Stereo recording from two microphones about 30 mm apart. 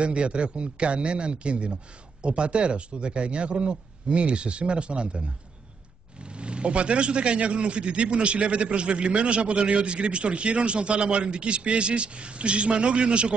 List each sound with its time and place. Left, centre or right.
0.0 s a man's voice: right
6.2 s a man's voice: right